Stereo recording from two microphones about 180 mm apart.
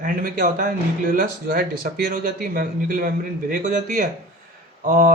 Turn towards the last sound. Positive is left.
turn(degrees=-50)  # may be behind; listen again after turning